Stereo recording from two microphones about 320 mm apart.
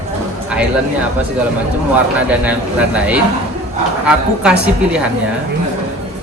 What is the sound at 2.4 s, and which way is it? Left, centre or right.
A man's voice, centre.